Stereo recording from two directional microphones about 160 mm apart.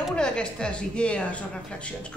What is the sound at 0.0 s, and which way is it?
A woman's voice, 5° left (ahead or behind).